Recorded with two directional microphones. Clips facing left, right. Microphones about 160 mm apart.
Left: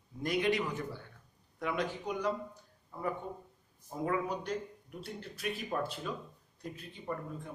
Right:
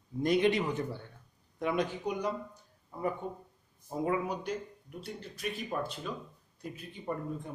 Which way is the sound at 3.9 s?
15° right (ahead or behind).